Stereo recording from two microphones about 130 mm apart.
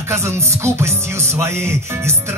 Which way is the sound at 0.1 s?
20° right (ahead or behind).